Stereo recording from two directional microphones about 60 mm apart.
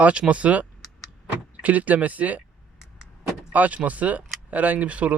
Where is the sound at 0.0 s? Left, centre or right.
Right.